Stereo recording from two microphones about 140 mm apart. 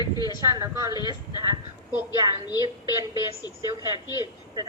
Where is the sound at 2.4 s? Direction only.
30° left (ahead or behind).